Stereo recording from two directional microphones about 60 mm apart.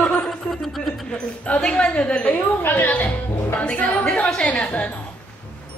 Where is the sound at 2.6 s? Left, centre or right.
Left.